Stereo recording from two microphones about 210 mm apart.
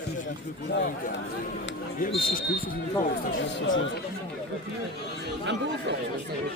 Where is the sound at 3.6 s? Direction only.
65° left (ahead or behind).